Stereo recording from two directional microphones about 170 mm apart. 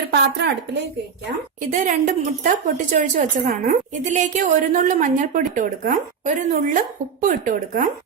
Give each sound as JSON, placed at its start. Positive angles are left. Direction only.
{"t": 0.1, "sound": "a woman's voice", "side_deg": -70}
{"t": 1.7, "sound": "a woman's voice", "side_deg": -50}